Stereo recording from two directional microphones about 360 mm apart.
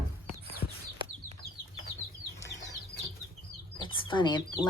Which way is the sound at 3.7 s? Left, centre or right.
Centre.